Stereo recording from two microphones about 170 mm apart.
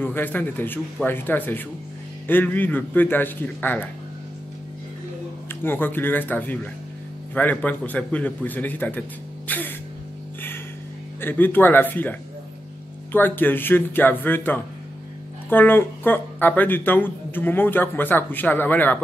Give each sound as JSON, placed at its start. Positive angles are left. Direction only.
{"t": 0.0, "sound": "speech", "side_deg": 10}
{"t": 5.6, "sound": "speech", "side_deg": 10}
{"t": 11.1, "sound": "speech", "side_deg": 10}